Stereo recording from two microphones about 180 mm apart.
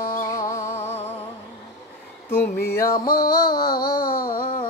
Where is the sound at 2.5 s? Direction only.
55° left (ahead or behind).